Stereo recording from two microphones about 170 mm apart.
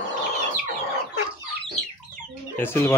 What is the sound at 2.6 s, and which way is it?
Speech, 15° left (ahead or behind).